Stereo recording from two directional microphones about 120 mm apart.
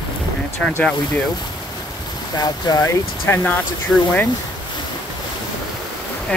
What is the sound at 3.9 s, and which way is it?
Speech, centre (ahead or behind).